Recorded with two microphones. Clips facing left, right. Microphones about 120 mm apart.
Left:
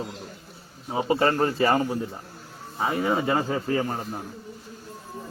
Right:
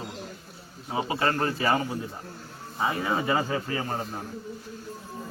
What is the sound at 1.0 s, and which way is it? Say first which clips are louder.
Speech: left 6 dB; 35° left (ahead or behind).